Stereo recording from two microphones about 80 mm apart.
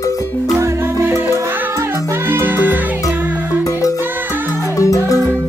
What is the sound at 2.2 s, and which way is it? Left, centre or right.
Music, right.